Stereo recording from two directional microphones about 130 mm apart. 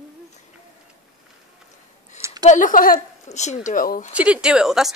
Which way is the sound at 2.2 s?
30° right (ahead or behind).